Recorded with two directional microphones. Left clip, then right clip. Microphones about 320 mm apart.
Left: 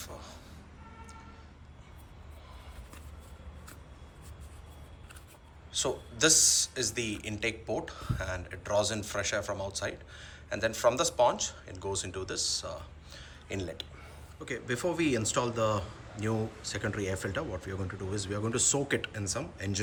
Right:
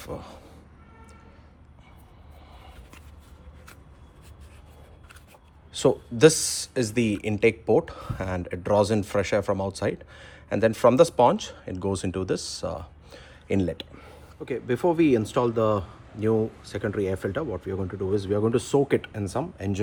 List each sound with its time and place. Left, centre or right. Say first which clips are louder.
0.0 s vehicle: right 8 dB; right
5.7 s speech: right 10 dB; right
14.4 s a man's voice: right 8 dB; centre